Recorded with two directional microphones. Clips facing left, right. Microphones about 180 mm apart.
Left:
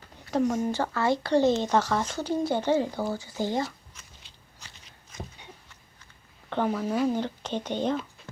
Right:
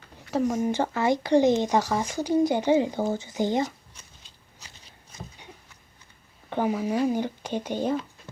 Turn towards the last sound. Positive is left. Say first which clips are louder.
# right 1 dB
turn(degrees=-10)  # may be behind; listen again after turning